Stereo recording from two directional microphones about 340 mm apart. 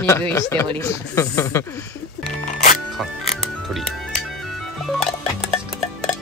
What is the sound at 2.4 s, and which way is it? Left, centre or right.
Music, left.